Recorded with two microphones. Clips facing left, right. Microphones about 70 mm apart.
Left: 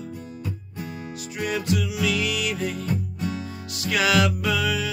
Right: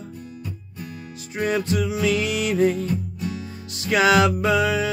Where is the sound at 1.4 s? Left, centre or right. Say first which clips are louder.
Right 3 dB; right.